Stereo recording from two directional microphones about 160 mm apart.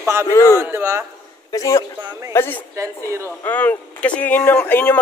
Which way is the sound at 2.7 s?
20° right (ahead or behind).